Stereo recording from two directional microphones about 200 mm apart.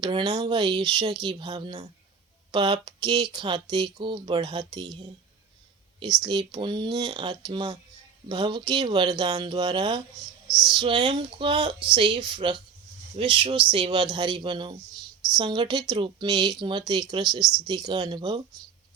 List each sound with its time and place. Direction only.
0.0 s speech: 20° right (ahead or behind)
6.5 s speech: 20° right (ahead or behind)
10.5 s a sound: centre (ahead or behind)
10.8 s speech: 25° right (ahead or behind)